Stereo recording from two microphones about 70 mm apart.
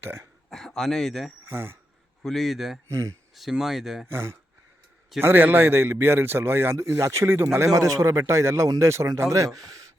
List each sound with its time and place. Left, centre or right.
0.0 s a man's voice: right
0.5 s speech: centre
1.5 s speech: right
2.2 s speech: centre
4.1 s a man's voice: right
7.7 s a man's voice: right
9.6 s speech: right